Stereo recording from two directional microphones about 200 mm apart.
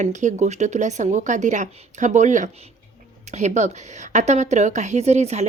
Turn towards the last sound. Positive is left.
turn(degrees=-35)  # may be behind; listen again after turning